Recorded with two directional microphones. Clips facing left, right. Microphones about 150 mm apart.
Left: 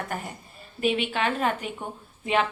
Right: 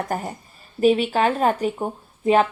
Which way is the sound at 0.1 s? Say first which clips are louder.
Right 7 dB; 40° right (ahead or behind).